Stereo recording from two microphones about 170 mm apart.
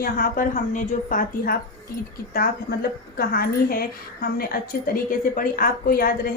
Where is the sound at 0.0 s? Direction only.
55° left (ahead or behind).